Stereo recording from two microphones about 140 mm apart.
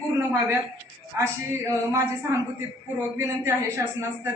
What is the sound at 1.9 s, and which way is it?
A woman's voice, 20° right (ahead or behind).